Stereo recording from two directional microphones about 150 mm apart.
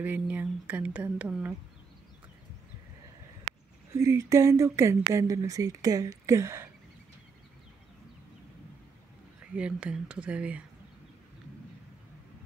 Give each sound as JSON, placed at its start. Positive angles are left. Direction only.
{"t": 0.0, "sound": "speech", "side_deg": -10}
{"t": 3.9, "sound": "speech", "side_deg": -20}
{"t": 9.6, "sound": "speech", "side_deg": -10}